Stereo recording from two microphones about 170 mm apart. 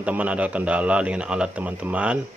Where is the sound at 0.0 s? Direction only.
5° right (ahead or behind).